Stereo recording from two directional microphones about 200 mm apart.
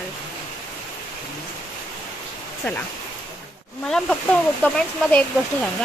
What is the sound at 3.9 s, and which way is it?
Speech, 5° left (ahead or behind).